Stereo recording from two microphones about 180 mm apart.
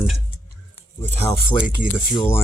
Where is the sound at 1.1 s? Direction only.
10° left (ahead or behind).